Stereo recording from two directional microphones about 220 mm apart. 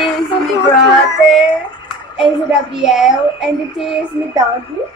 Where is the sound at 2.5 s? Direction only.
Centre (ahead or behind).